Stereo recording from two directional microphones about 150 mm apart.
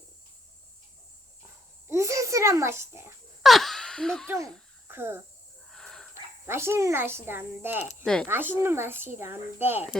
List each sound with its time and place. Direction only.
1.9 s a sound: 20° right (ahead or behind)
3.4 s speech: centre (ahead or behind)
4.9 s speech: 15° right (ahead or behind)
5.7 s a sound: 5° left (ahead or behind)
6.4 s speech: 15° right (ahead or behind)
8.0 s speech: 5° left (ahead or behind)
8.3 s speech: 15° right (ahead or behind)